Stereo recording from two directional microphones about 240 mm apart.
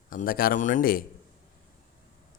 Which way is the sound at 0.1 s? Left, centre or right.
Left.